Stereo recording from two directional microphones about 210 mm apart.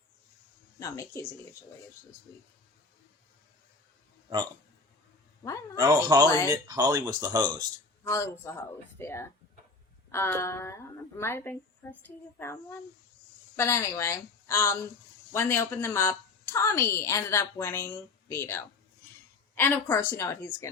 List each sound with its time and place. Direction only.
0.8 s a woman's voice: 15° left (ahead or behind)
5.7 s speech: 20° right (ahead or behind)
6.2 s a woman's voice: 15° left (ahead or behind)
6.5 s speech: 20° right (ahead or behind)
8.0 s a woman's voice: 15° left (ahead or behind)
13.6 s a woman's voice: 10° left (ahead or behind)